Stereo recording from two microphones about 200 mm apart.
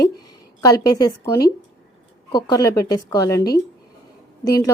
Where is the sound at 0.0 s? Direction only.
20° left (ahead or behind).